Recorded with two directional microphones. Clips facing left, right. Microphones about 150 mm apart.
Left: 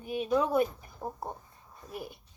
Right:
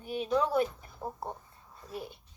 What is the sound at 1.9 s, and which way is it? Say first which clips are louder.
Speech: even; 10° left (ahead or behind).